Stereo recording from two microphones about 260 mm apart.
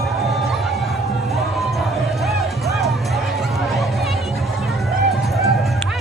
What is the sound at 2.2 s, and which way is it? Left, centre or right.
Music, centre.